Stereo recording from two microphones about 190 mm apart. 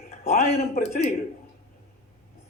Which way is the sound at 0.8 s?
45° left (ahead or behind).